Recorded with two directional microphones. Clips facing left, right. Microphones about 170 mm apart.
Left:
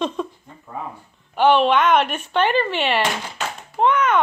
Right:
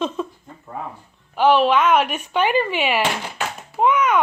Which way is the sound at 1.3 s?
Centre (ahead or behind).